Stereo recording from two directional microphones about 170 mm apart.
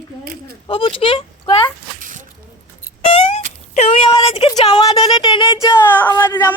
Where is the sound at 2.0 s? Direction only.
50° right (ahead or behind).